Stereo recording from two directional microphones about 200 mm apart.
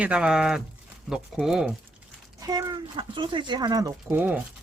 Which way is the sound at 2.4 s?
20° right (ahead or behind).